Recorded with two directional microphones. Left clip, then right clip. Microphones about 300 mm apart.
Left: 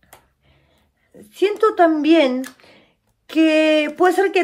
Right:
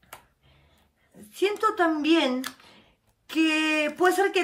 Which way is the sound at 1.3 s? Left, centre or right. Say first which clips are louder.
Left 8 dB; centre.